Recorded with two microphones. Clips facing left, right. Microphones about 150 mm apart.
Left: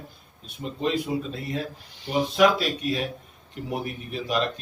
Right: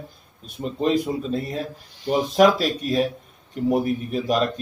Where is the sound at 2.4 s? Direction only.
40° right (ahead or behind).